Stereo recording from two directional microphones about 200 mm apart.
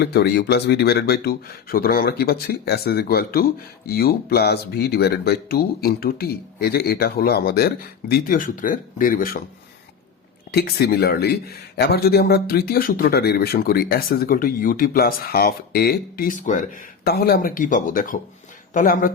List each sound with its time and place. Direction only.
0.0 s speech: 55° left (ahead or behind)
10.5 s speech: 50° left (ahead or behind)
17.1 s speech: 50° left (ahead or behind)